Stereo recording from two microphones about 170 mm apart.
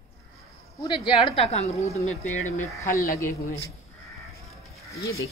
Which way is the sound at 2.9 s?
15° left (ahead or behind).